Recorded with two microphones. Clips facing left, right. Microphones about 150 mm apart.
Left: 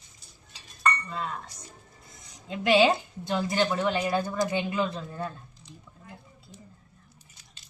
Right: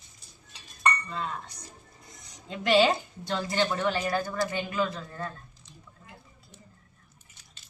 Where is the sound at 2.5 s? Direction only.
10° left (ahead or behind).